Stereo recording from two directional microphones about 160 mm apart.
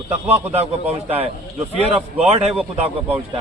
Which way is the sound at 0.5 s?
40° right (ahead or behind).